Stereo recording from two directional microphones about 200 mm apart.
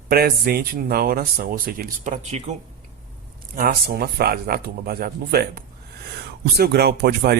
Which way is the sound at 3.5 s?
50° right (ahead or behind).